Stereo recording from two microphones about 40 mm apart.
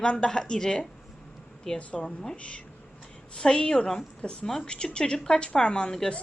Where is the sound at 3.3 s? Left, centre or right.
Centre.